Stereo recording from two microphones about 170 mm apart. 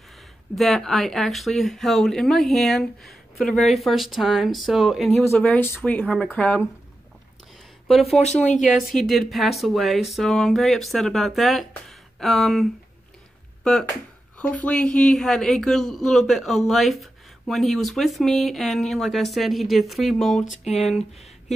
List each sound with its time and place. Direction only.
0.6 s speech: centre (ahead or behind)
5.4 s speech: 10° left (ahead or behind)
8.0 s speech: 40° left (ahead or behind)
8.6 s speech: centre (ahead or behind)
13.7 s speech: 5° left (ahead or behind)
20.6 s speech: 40° left (ahead or behind)